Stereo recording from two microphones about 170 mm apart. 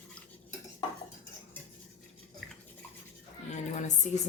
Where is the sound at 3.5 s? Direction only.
45° left (ahead or behind).